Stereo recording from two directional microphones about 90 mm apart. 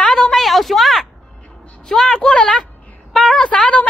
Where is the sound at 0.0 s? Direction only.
5° left (ahead or behind).